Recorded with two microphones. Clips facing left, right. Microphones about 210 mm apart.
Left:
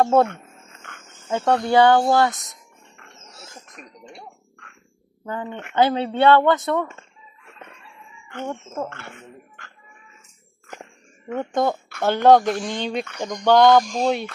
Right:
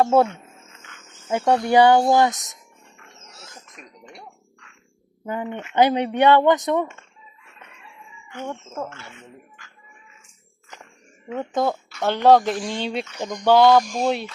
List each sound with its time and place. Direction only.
0.0 s speech: 5° right (ahead or behind)
0.8 s jingle bell: 55° left (ahead or behind)
1.3 s speech: 10° right (ahead or behind)
5.2 s speech: 15° right (ahead or behind)
8.4 s speech: 5° left (ahead or behind)
8.9 s speech: 60° left (ahead or behind)
11.3 s speech: centre (ahead or behind)